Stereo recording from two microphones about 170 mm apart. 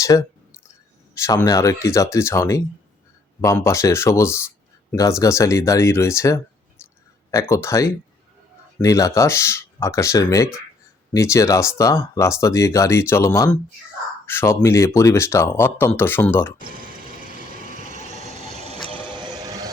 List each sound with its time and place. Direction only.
0.0 s speech: 20° left (ahead or behind)
16.6 s a sound: 55° right (ahead or behind); by 18.8 s 40° right (ahead or behind)
19.1 s vehicle: 25° right (ahead or behind)